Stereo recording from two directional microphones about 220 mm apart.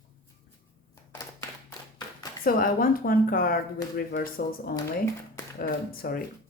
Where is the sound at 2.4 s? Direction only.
40° left (ahead or behind).